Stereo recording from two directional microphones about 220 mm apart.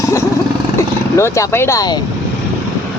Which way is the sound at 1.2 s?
10° left (ahead or behind).